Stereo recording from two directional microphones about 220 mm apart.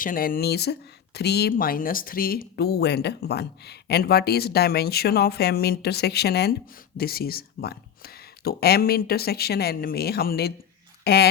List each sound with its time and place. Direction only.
0.0 s speech: 40° left (ahead or behind)